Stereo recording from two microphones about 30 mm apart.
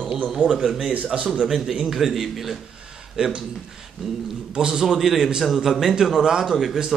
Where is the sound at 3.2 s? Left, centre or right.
Right.